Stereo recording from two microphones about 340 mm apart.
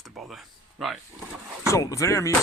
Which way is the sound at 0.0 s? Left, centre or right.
Centre.